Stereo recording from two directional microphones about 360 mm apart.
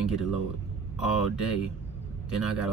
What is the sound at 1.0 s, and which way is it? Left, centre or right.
Speech, left.